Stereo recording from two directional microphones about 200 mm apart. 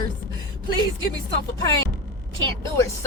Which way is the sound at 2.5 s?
15° left (ahead or behind).